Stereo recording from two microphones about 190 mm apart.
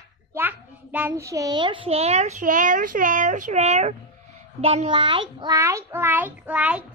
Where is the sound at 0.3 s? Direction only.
10° right (ahead or behind).